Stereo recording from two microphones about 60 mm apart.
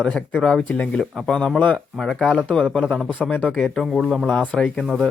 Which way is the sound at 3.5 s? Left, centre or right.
Centre.